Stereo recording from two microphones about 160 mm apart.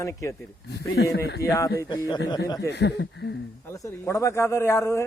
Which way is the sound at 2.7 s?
90° left.